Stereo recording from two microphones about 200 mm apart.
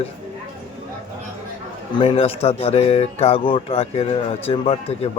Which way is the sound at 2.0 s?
30° left (ahead or behind).